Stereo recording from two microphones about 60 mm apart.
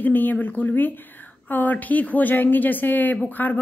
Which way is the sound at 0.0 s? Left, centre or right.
Left.